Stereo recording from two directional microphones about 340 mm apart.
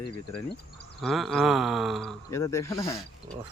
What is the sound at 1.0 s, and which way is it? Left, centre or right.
Speech, centre.